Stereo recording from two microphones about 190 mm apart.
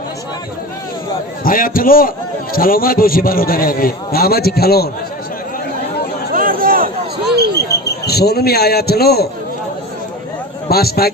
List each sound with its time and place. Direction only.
1.5 s a man's voice: 45° left (ahead or behind)
6.3 s a sound: 50° right (ahead or behind)
8.0 s a man's voice: 55° left (ahead or behind)
10.7 s a man's voice: 55° left (ahead or behind)